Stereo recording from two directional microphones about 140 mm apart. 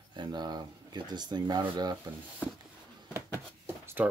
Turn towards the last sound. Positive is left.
turn(degrees=-10)  # may be behind; listen again after turning